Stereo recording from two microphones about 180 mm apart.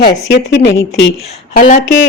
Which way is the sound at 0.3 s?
85° left.